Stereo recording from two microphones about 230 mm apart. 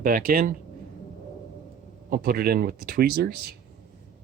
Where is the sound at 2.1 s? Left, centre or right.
Right.